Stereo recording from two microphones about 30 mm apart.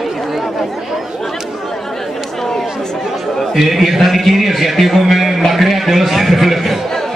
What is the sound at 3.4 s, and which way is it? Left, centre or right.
A man's voice, centre.